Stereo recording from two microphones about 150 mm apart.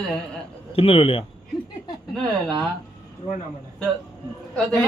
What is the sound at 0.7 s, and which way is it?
Speech, 40° left (ahead or behind).